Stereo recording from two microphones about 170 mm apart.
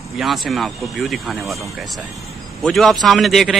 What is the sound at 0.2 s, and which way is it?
Speech, centre (ahead or behind).